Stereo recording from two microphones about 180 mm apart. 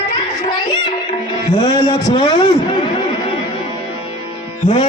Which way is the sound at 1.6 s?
30° left (ahead or behind).